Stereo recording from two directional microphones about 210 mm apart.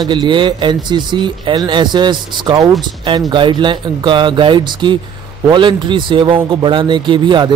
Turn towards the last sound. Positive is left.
turn(degrees=-20)  # may be behind; listen again after turning